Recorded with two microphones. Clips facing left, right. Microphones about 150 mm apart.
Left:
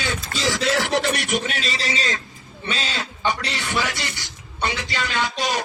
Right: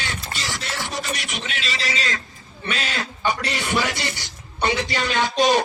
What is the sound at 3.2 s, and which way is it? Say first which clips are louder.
Speech: right 1 dB; 15° right (ahead or behind).